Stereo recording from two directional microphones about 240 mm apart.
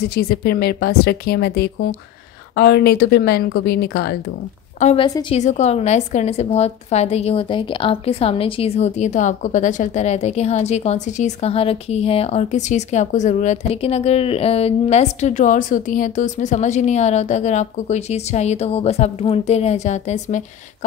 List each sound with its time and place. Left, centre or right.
0.0 s speech: left
4.7 s a woman's voice: left